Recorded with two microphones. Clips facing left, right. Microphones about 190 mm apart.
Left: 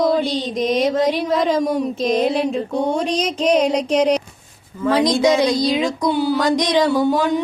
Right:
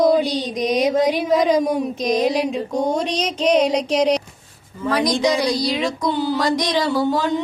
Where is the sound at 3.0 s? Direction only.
10° left (ahead or behind).